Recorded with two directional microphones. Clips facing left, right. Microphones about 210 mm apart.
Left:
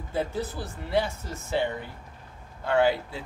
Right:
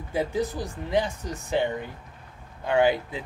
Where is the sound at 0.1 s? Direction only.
15° right (ahead or behind).